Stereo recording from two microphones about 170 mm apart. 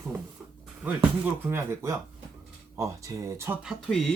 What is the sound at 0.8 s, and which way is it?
Speech, 5° right (ahead or behind).